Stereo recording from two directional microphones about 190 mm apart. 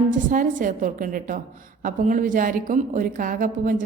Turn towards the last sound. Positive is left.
turn(degrees=-45)  # may be behind; listen again after turning